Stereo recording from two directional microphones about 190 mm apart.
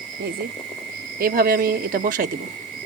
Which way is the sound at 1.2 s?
50° right (ahead or behind).